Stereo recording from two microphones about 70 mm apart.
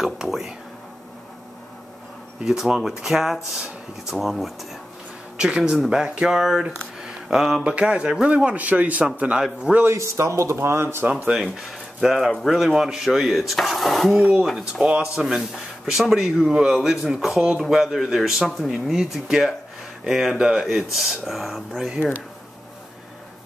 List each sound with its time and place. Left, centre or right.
0.0 s speech: centre
2.4 s speech: centre
7.7 s speech: centre
9.9 s speech: right
11.1 s speech: centre
12.0 s speech: centre
14.7 s speech: centre